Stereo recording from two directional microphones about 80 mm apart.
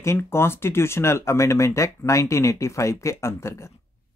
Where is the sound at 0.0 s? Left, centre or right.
Left.